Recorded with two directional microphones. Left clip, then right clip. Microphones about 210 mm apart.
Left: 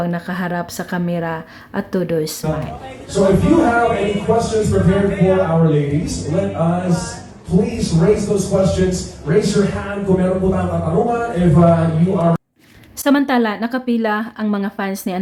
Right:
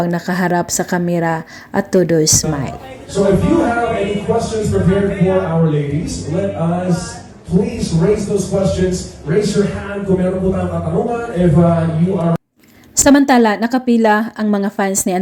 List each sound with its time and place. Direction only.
0.0 s a woman's voice: 20° right (ahead or behind)
3.2 s a man's voice: centre (ahead or behind)
13.0 s a woman's voice: 20° right (ahead or behind)